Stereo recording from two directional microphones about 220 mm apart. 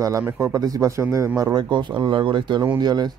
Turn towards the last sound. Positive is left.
turn(degrees=-20)  # may be behind; listen again after turning